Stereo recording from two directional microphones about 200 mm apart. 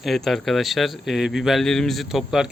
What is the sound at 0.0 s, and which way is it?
Speech, centre (ahead or behind).